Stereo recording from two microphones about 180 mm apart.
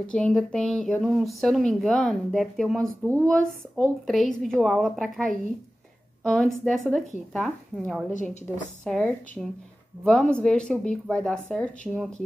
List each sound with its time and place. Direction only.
0.1 s speech: 5° left (ahead or behind)
8.1 s a woman's voice: 45° left (ahead or behind)
8.8 s speech: 5° left (ahead or behind)